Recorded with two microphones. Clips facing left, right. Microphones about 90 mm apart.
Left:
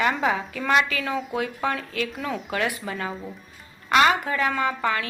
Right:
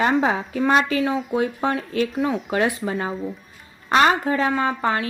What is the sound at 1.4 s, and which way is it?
A woman's voice, 30° right (ahead or behind).